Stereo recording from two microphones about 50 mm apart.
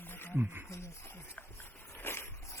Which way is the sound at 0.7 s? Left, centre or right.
Left.